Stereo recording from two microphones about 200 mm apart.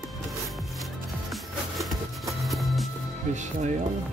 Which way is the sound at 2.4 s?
Centre (ahead or behind).